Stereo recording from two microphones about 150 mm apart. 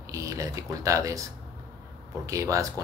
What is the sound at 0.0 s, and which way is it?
Speech, 20° right (ahead or behind).